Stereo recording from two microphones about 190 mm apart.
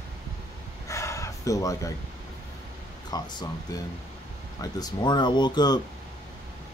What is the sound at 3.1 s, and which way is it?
Speech, 20° left (ahead or behind).